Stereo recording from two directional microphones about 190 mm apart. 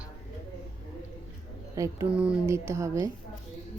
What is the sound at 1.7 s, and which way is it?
Speech, 15° right (ahead or behind).